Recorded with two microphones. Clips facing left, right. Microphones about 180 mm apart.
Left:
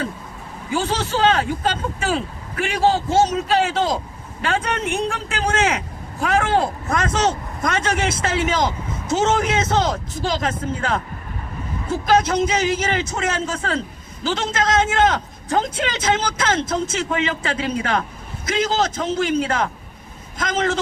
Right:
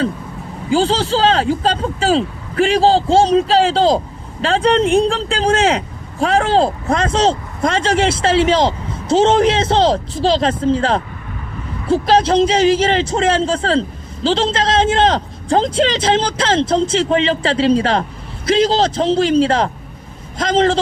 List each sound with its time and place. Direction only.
0.7 s a man's voice: 30° right (ahead or behind)